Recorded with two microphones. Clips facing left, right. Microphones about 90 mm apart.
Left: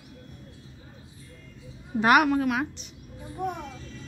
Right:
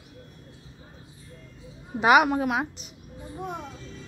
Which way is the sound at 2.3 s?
20° right (ahead or behind).